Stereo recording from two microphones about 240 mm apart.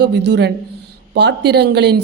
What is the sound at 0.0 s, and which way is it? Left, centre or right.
A woman's voice, right.